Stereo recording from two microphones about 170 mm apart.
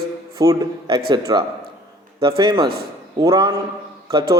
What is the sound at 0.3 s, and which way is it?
A man's voice, 20° right (ahead or behind).